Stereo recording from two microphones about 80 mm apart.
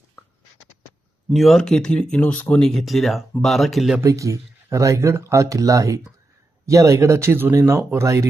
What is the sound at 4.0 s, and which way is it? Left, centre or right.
Speech, right.